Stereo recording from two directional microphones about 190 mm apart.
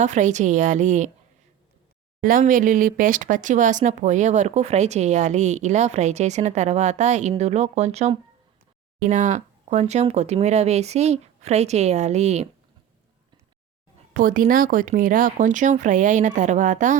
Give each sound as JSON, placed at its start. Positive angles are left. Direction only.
{"t": 0.0, "sound": "speech", "side_deg": -40}
{"t": 2.2, "sound": "speech", "side_deg": -45}
{"t": 14.1, "sound": "speech", "side_deg": -45}